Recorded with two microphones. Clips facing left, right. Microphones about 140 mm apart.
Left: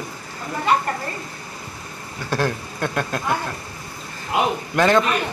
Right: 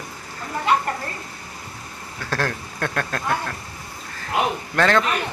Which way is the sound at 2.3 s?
10° left (ahead or behind).